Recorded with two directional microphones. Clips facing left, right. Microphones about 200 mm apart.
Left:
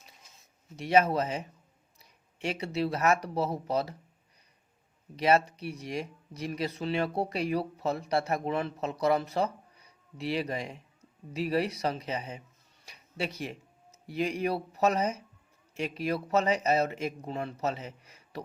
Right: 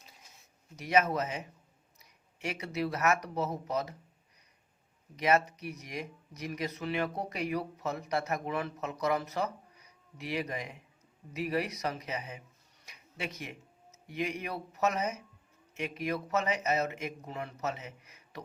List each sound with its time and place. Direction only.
0.8 s speech: 30° left (ahead or behind)
5.1 s speech: 30° left (ahead or behind)